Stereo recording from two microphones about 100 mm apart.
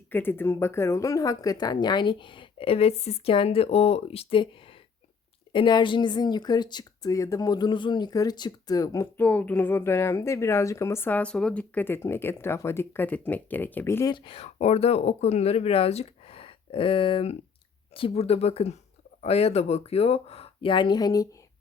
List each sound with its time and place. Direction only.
0.1 s speech: 20° left (ahead or behind); by 4.8 s 60° left (ahead or behind)
5.5 s speech: 50° left (ahead or behind); by 9.0 s 35° left (ahead or behind)
9.1 s speech: 15° left (ahead or behind)
14.0 s speech: 50° left (ahead or behind)
17.9 s speech: 75° left (ahead or behind); by 21.2 s 40° left (ahead or behind)